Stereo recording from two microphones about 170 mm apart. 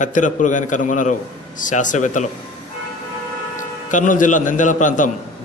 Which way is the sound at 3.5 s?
50° left (ahead or behind).